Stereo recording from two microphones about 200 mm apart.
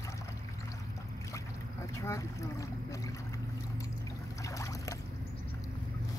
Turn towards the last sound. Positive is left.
turn(degrees=15)  # may be behind; listen again after turning